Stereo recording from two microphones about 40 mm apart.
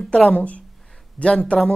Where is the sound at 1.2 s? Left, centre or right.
Left.